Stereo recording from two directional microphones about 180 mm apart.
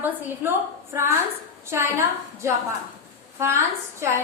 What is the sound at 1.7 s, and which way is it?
Speech, 15° right (ahead or behind).